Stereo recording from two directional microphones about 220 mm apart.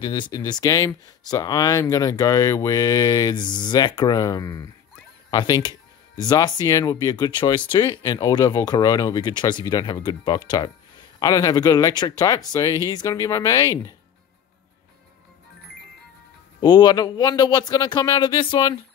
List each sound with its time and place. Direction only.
0.0 s speech: 20° left (ahead or behind)
16.6 s speech: 20° left (ahead or behind)